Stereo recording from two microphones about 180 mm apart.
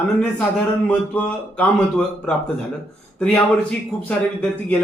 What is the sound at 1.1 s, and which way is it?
A man's voice, 10° left (ahead or behind).